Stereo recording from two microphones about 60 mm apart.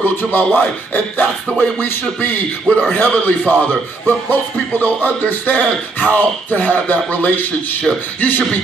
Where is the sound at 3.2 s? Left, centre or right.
Left.